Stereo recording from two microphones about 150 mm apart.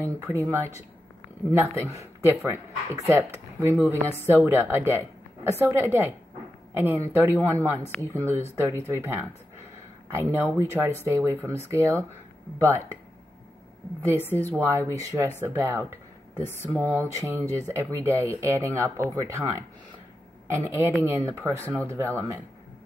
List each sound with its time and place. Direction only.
0.0 s speech: 15° right (ahead or behind)
10.3 s speech: 15° right (ahead or behind)
14.1 s a woman's voice: 15° left (ahead or behind)
14.7 s a man's voice: 20° right (ahead or behind)